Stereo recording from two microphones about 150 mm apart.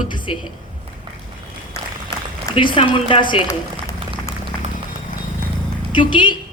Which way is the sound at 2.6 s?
35° left (ahead or behind).